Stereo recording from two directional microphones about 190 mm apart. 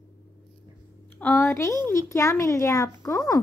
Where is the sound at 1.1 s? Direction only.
10° left (ahead or behind).